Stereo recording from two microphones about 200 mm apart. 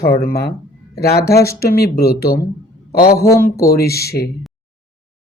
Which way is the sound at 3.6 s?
50° left (ahead or behind).